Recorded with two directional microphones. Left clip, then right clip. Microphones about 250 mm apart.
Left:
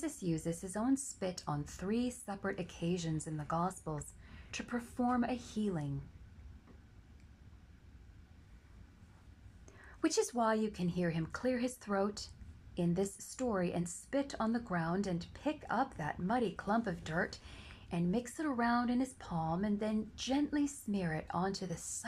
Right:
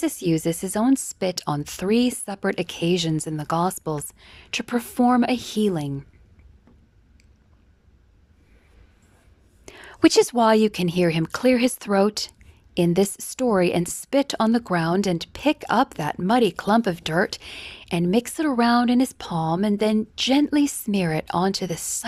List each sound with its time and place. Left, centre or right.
0.0 s speech: right
9.6 s speech: right